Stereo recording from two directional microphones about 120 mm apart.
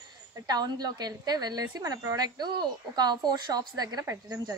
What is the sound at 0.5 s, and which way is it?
A woman's voice, 35° right (ahead or behind).